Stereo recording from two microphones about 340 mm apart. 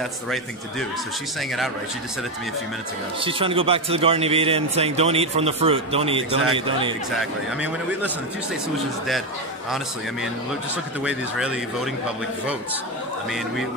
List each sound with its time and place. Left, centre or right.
3.2 s a man's voice: centre
7.2 s a man's voice: centre
11.1 s a man's voice: centre